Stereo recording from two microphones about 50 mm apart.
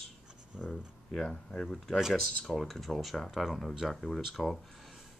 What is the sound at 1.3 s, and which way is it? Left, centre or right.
Speech, centre.